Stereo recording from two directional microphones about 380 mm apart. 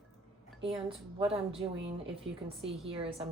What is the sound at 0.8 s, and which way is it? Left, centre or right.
A woman's voice, centre.